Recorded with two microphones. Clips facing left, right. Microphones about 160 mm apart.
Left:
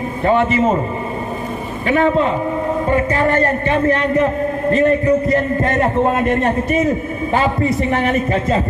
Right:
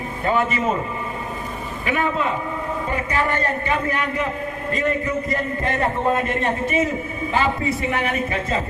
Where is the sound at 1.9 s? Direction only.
35° left (ahead or behind).